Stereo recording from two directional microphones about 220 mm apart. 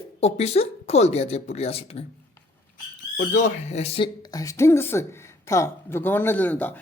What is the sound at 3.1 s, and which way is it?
Speech, 35° left (ahead or behind).